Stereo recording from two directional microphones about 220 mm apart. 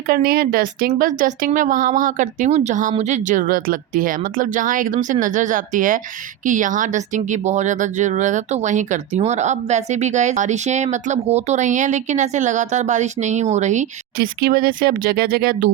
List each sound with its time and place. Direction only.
0.1 s a woman's voice: 45° right (ahead or behind)